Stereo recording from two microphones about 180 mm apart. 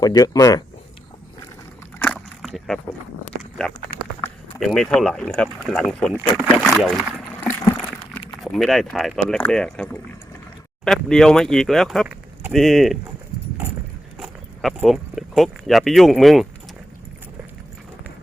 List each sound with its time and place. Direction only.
0.0 s speech: 20° left (ahead or behind)
2.0 s a sound: 5° left (ahead or behind)
3.6 s speech: 5° left (ahead or behind)
8.3 s speech: centre (ahead or behind)
14.2 s speech: centre (ahead or behind)